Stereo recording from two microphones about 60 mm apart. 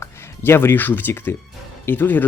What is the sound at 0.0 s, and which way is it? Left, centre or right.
Speech, left.